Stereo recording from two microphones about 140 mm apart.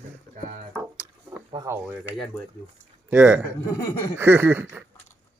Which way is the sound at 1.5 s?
35° right (ahead or behind).